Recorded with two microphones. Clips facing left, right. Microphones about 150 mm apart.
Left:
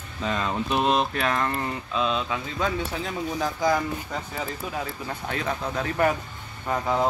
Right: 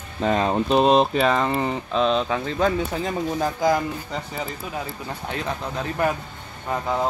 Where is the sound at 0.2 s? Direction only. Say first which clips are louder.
Right 6 dB; 55° right (ahead or behind).